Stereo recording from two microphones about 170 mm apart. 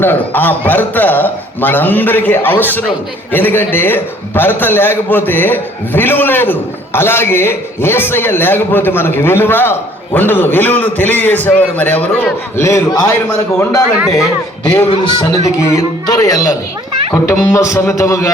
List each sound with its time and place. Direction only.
0.0 s a man's voice: 10° left (ahead or behind)
14.8 s a man's voice: 20° left (ahead or behind)